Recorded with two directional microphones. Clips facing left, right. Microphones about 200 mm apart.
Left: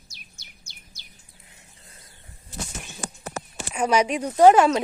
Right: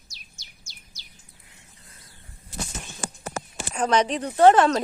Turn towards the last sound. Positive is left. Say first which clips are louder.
# left 1 dB
turn(degrees=10)  # may be behind; listen again after turning